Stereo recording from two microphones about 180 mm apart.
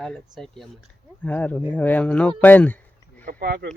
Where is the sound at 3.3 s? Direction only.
55° right (ahead or behind).